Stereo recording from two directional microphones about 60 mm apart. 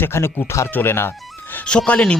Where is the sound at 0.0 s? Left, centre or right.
Left.